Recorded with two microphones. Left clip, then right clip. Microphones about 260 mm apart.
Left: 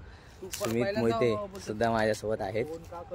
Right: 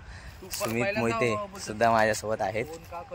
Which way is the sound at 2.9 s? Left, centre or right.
Centre.